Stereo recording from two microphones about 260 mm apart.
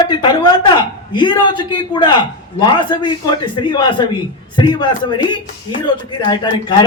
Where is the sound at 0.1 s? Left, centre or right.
Centre.